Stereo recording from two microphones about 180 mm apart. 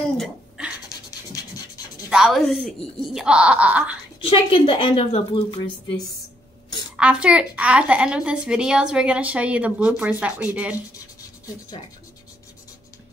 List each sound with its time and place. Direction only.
0.2 s a sound: centre (ahead or behind)
2.0 s speech: 5° right (ahead or behind)
4.2 s a woman's voice: 30° left (ahead or behind)
7.0 s a woman's voice: 5° right (ahead or behind)